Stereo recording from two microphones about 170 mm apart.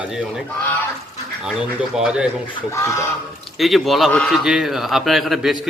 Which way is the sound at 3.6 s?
Centre (ahead or behind).